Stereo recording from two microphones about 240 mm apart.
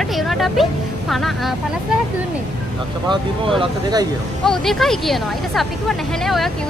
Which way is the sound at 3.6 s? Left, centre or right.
Centre.